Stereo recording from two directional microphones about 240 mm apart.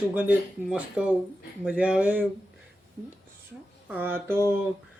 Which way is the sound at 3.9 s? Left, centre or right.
Centre.